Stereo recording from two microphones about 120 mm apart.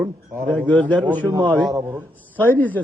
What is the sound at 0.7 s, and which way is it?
Speech, 10° left (ahead or behind).